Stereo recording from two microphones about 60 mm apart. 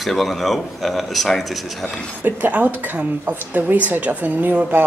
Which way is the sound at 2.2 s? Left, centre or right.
Right.